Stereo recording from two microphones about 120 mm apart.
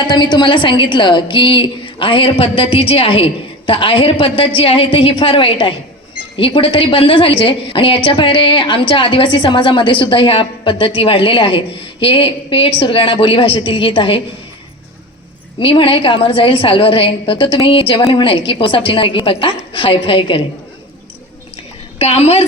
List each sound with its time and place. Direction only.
0.1 s a woman's voice: 40° left (ahead or behind)
15.5 s a woman's voice: 45° left (ahead or behind)
21.9 s a woman's voice: 60° left (ahead or behind)